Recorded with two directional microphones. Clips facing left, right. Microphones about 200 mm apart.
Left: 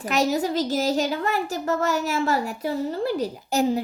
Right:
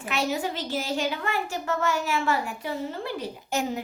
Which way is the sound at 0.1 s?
40° left (ahead or behind).